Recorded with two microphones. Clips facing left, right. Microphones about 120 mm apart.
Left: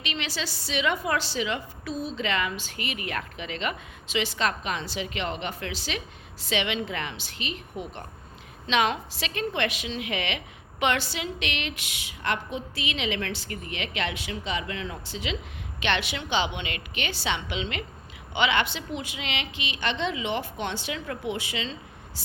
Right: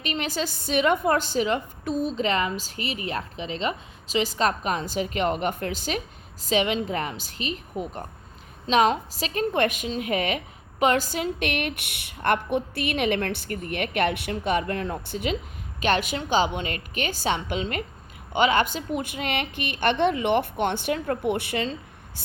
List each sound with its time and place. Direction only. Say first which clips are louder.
0.0 s a woman's voice: right 5 dB; 45° right (ahead or behind)